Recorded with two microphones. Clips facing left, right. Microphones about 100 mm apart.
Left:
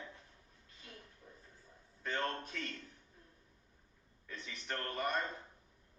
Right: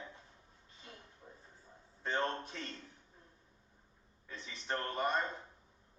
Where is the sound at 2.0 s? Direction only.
25° right (ahead or behind).